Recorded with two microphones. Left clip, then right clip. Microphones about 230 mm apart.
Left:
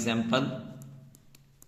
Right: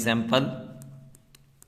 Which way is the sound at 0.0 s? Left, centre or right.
Right.